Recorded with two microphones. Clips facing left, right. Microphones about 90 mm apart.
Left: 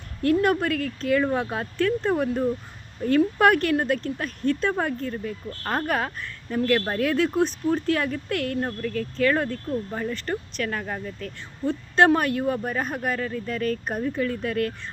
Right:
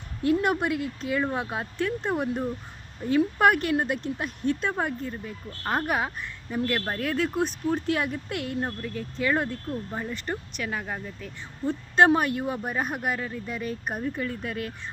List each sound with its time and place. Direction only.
0.4 s speech: 15° right (ahead or behind)